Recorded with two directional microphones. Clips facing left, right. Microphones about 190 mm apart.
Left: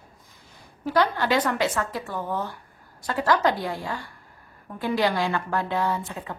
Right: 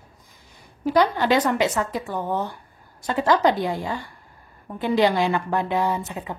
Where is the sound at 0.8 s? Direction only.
20° right (ahead or behind).